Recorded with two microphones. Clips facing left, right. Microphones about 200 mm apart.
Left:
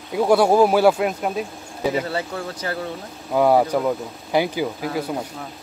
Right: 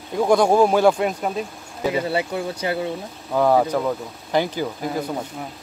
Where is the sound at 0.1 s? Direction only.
5° left (ahead or behind).